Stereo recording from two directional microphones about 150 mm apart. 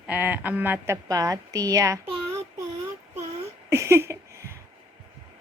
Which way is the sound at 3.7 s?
20° right (ahead or behind).